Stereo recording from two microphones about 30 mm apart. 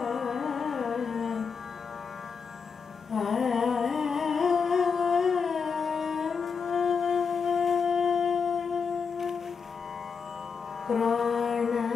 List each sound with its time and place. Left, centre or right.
0.0 s carnatic music: centre
3.1 s humming: centre
10.9 s music: centre